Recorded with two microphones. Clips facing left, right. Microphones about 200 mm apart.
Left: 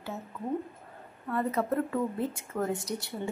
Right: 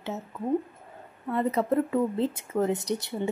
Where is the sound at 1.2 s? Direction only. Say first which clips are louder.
Right 4 dB; 20° right (ahead or behind).